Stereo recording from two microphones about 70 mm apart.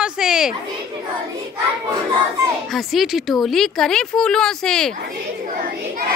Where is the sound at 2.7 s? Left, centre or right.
Centre.